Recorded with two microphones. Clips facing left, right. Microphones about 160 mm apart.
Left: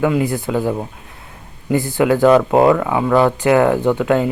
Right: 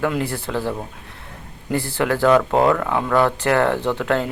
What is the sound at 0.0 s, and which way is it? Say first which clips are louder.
Speech: left 5 dB; 5° left (ahead or behind).